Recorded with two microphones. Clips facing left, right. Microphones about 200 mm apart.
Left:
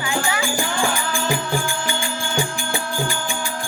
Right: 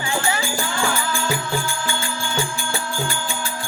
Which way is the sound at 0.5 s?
15° left (ahead or behind).